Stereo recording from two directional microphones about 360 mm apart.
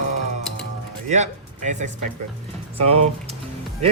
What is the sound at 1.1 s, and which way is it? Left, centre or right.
Speech, centre.